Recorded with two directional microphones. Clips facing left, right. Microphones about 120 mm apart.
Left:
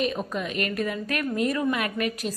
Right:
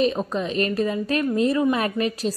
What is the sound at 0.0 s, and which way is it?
A woman's voice, 30° right (ahead or behind).